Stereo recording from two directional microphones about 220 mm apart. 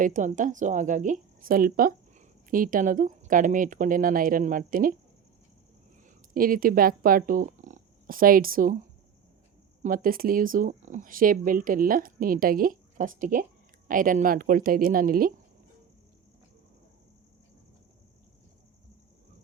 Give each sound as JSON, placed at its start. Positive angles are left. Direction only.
{"t": 0.0, "sound": "speech", "side_deg": -35}
{"t": 6.3, "sound": "speech", "side_deg": -40}
{"t": 9.8, "sound": "speech", "side_deg": -40}